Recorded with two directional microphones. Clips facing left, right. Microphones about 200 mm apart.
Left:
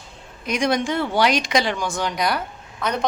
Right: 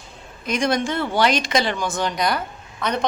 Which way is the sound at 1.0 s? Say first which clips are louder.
Even; centre (ahead or behind).